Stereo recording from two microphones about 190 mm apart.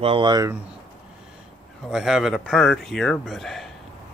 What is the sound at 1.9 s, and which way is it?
A man's voice, centre (ahead or behind).